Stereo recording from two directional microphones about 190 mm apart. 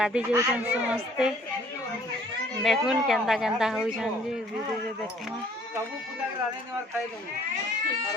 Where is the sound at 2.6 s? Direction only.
Centre (ahead or behind).